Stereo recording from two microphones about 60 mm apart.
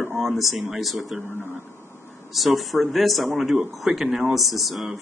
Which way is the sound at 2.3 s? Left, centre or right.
Centre.